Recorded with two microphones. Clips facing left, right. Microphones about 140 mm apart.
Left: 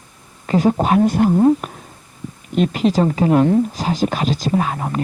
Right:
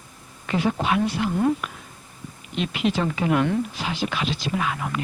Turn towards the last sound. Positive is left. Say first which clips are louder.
# left 6 dB
turn(degrees=40)  # may be behind; listen again after turning